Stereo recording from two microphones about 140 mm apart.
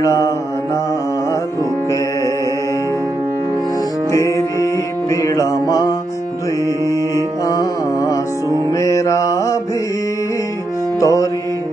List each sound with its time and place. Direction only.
0.0 s mantra: 20° left (ahead or behind)
4.1 s music: 20° left (ahead or behind)
7.4 s music: 25° left (ahead or behind)
8.7 s mantra: 20° left (ahead or behind)
11.0 s music: 25° left (ahead or behind)